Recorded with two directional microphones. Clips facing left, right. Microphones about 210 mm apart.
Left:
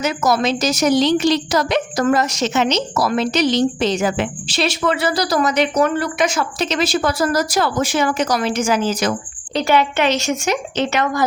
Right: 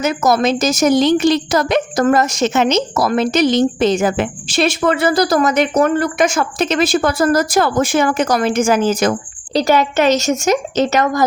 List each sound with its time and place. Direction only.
0.0 s a woman's voice: 50° right (ahead or behind)
9.5 s a woman's voice: 40° right (ahead or behind)